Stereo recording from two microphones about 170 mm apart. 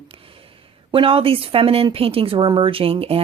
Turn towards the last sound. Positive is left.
turn(degrees=-35)  # may be behind; listen again after turning